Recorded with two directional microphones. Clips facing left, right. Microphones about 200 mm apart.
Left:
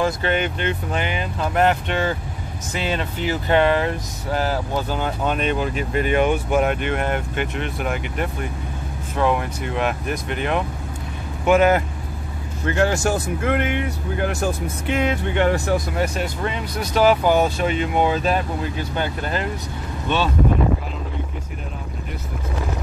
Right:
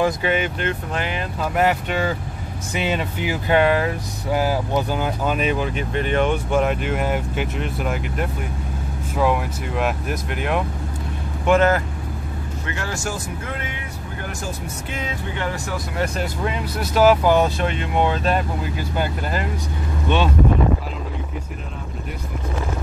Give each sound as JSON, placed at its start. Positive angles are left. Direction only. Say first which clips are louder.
{"t": 0.0, "sound": "speech", "louder": "right 1 dB", "side_deg": -5}
{"t": 11.4, "sound": "speech", "louder": "left 1 dB", "side_deg": 10}
{"t": 12.7, "sound": "speech", "louder": "left 10 dB", "side_deg": 65}
{"t": 16.4, "sound": "speech", "louder": "right 1 dB", "side_deg": -5}